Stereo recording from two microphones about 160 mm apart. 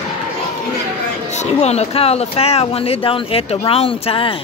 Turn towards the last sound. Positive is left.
turn(degrees=35)  # may be behind; listen again after turning